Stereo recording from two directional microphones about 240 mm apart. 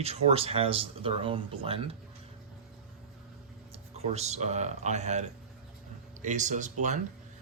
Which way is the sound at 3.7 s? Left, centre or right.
Right.